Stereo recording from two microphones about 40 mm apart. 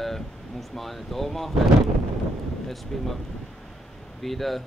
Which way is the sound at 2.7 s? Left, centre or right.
Centre.